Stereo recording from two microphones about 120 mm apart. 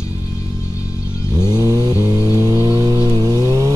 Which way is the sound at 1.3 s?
35° right (ahead or behind).